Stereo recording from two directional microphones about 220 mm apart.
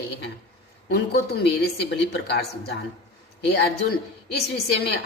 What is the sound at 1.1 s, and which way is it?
A woman's voice, 50° left (ahead or behind).